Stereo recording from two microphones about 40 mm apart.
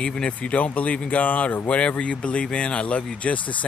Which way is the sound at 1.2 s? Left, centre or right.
Left.